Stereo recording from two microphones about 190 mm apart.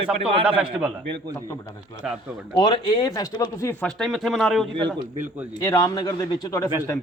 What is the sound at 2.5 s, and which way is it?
Speech, 25° left (ahead or behind).